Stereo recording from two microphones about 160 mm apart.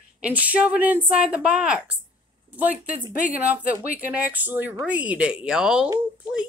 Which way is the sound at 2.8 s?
60° left (ahead or behind).